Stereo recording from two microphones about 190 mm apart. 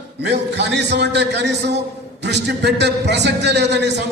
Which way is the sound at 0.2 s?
65° right (ahead or behind).